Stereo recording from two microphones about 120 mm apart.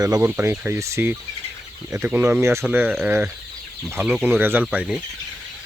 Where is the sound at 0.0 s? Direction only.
30° right (ahead or behind).